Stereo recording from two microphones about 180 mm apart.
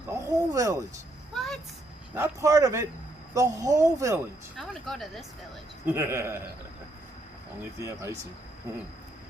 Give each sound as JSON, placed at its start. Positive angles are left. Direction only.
{"t": 0.1, "sound": "speech", "side_deg": -20}
{"t": 1.3, "sound": "vehicle", "side_deg": 0}
{"t": 2.1, "sound": "a man's voice", "side_deg": -15}
{"t": 4.5, "sound": "speech", "side_deg": 0}
{"t": 5.8, "sound": "a man's voice", "side_deg": -15}
{"t": 7.8, "sound": "a man's voice", "side_deg": -15}